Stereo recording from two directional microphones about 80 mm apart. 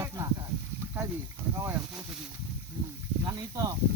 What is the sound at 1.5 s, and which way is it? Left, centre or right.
Speech, right.